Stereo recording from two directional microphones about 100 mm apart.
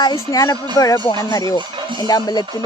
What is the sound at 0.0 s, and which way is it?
Speech, 40° left (ahead or behind).